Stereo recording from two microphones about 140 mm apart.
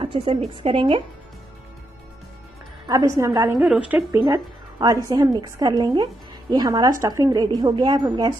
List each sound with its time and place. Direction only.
0.0 s a woman's voice: 35° right (ahead or behind)
2.9 s a woman's voice: 20° right (ahead or behind)
3.5 s a woman's voice: 5° right (ahead or behind)
4.3 s a woman's voice: 25° right (ahead or behind)